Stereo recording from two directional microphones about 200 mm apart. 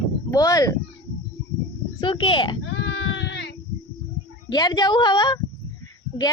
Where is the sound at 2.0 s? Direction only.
25° left (ahead or behind).